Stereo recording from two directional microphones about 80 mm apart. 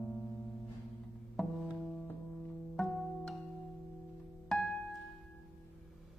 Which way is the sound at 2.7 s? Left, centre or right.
Centre.